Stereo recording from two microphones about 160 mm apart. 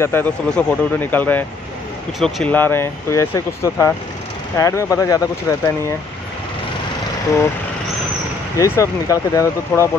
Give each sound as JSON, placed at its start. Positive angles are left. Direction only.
{"t": 0.0, "sound": "speech", "side_deg": 10}
{"t": 8.5, "sound": "speech", "side_deg": 20}